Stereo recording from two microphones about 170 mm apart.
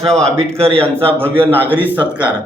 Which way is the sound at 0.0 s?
5° left (ahead or behind).